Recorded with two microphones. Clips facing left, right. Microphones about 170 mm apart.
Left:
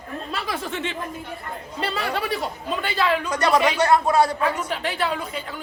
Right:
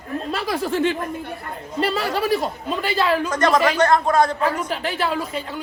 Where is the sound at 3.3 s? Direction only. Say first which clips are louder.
Right 1 dB; 10° left (ahead or behind).